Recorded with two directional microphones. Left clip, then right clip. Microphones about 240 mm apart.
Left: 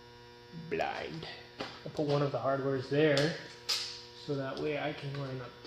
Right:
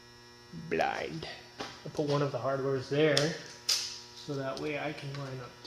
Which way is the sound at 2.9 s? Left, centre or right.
Centre.